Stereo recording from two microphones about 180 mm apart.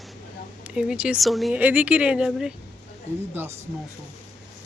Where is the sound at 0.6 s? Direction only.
5° right (ahead or behind).